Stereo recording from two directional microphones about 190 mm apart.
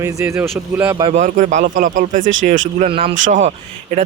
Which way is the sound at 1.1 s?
40° right (ahead or behind).